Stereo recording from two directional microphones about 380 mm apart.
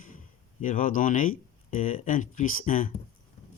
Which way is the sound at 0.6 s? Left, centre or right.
Centre.